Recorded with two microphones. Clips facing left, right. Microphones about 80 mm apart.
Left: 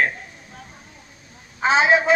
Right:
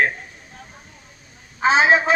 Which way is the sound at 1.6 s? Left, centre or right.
Right.